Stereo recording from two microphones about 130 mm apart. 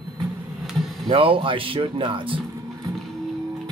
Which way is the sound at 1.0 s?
45° right (ahead or behind).